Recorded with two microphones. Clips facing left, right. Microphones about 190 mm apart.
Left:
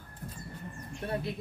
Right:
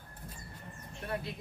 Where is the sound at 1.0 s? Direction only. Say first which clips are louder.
Left 3 dB; 30° left (ahead or behind).